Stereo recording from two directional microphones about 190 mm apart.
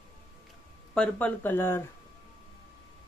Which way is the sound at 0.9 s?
5° left (ahead or behind).